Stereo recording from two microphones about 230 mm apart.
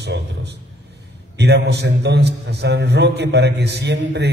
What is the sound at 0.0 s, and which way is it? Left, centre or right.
A man's voice, right.